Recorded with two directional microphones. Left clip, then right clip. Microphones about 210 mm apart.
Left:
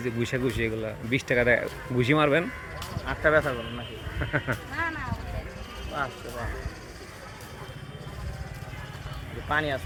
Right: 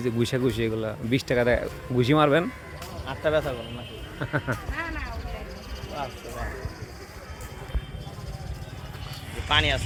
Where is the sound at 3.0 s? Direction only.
30° left (ahead or behind).